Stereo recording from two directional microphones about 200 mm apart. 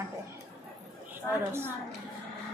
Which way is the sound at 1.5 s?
10° right (ahead or behind).